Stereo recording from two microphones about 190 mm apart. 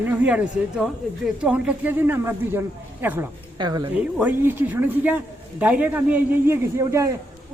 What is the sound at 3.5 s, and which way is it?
Speech, 25° right (ahead or behind).